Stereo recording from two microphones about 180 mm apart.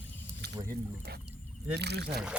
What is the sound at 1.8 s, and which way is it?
Speech, 65° right (ahead or behind).